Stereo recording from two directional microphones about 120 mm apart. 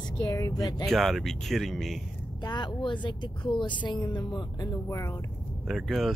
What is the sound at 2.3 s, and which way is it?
Speech, 40° left (ahead or behind).